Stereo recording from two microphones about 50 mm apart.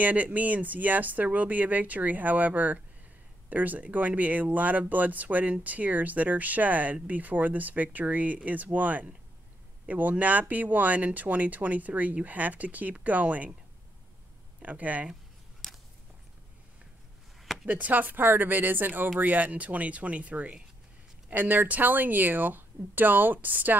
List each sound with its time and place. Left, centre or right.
0.0 s speech: right
14.6 s speech: right
15.6 s a sound: centre
17.6 s speech: right